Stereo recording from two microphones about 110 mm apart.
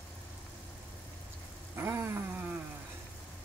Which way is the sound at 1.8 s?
20° right (ahead or behind).